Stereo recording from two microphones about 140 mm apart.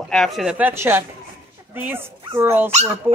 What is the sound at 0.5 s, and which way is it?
A woman's voice, 15° right (ahead or behind).